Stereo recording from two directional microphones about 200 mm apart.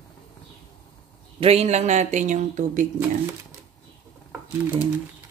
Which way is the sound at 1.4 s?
30° right (ahead or behind).